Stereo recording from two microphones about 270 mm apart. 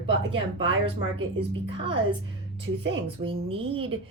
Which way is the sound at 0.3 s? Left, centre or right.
Centre.